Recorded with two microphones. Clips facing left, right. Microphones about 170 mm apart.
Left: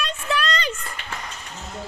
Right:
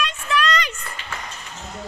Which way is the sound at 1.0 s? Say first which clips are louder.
Even; 55° left (ahead or behind).